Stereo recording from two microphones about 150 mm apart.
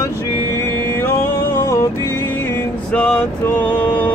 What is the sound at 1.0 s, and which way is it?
Music, 15° left (ahead or behind).